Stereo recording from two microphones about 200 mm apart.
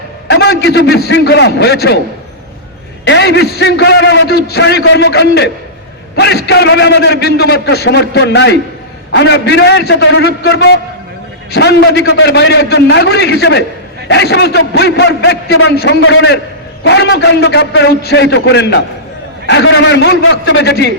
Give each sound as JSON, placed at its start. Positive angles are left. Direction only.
{"t": 0.3, "sound": "a man's voice", "side_deg": 55}
{"t": 3.0, "sound": "a man's voice", "side_deg": 60}
{"t": 16.0, "sound": "a man's voice", "side_deg": 75}